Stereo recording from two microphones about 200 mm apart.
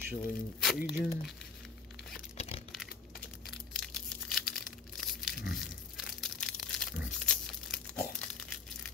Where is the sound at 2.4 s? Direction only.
30° left (ahead or behind).